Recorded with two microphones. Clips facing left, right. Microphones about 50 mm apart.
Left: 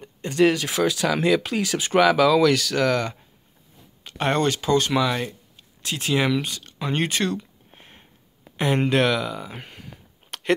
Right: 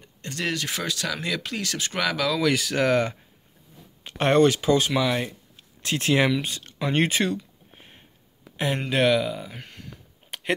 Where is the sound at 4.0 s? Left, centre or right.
Right.